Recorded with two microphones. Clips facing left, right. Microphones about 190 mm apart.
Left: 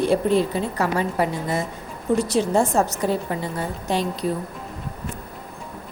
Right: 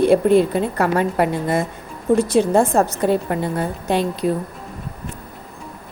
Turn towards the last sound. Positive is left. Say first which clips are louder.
# right 4 dB
turn(degrees=-55)  # may be behind; listen again after turning